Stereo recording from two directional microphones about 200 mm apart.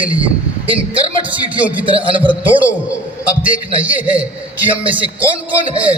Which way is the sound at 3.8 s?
5° right (ahead or behind).